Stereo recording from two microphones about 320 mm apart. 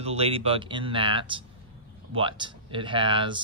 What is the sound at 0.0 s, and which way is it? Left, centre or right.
Speech, centre.